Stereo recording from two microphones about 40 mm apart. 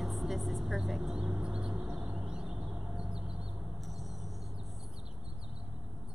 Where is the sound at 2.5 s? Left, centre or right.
Centre.